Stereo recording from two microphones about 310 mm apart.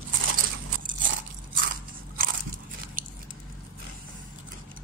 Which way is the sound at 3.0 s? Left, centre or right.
Right.